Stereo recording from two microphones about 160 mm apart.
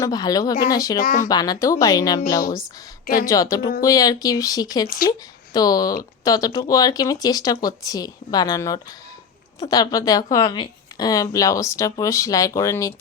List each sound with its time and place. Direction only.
0.0 s a woman's voice: 25° left (ahead or behind)
1.0 s speech: 55° left (ahead or behind)
1.3 s a woman's voice: 25° left (ahead or behind)